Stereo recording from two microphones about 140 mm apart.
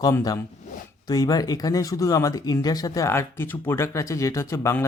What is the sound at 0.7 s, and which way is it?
Zipper, 60° left (ahead or behind).